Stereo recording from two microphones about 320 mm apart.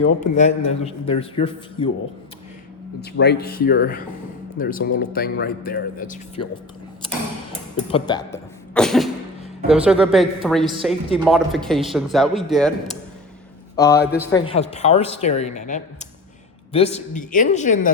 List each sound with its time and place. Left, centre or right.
0.2 s speech: left
3.0 s speech: left
7.9 s cough: centre
9.6 s a man's voice: centre; by 17.9 s left